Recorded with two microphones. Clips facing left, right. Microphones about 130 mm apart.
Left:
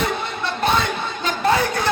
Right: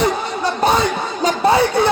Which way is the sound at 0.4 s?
35° right (ahead or behind).